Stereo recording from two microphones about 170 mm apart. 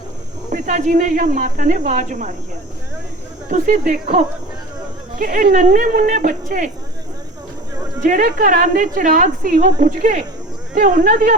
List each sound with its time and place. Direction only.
0.5 s a woman's voice: 50° right (ahead or behind)
3.5 s a woman's voice: 50° right (ahead or behind)
5.2 s a woman's voice: 50° right (ahead or behind)
8.0 s a woman's voice: 50° right (ahead or behind)